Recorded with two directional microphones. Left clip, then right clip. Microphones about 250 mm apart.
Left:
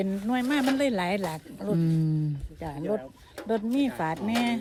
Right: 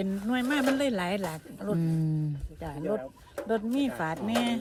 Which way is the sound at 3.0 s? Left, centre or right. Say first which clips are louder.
Right 3 dB; centre.